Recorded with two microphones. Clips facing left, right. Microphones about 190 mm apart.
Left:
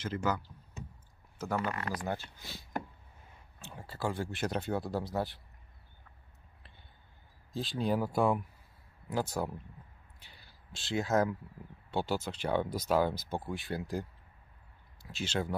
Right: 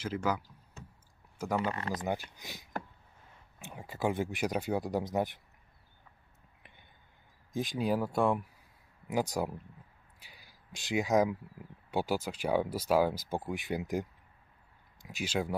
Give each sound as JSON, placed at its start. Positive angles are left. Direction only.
{"t": 0.0, "sound": "speech", "side_deg": -5}
{"t": 1.6, "sound": "speech", "side_deg": -25}
{"t": 7.5, "sound": "speech", "side_deg": -15}
{"t": 9.0, "sound": "speech", "side_deg": -15}
{"t": 15.0, "sound": "speech", "side_deg": -10}